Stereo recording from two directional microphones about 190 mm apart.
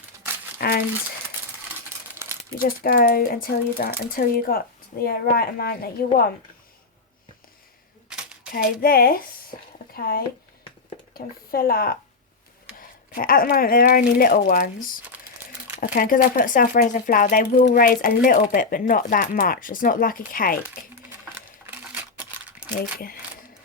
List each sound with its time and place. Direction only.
0.6 s speech: 55° left (ahead or behind)
2.5 s speech: 50° left (ahead or behind)
8.1 s a sound: 5° right (ahead or behind)
8.5 s speech: 50° left (ahead or behind)
11.5 s speech: 50° left (ahead or behind)
13.1 s speech: 50° left (ahead or behind)
21.7 s a sound: 10° right (ahead or behind)
22.8 s speech: 50° left (ahead or behind)